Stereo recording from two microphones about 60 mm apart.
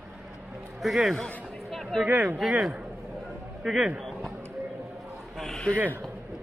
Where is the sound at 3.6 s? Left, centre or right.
Centre.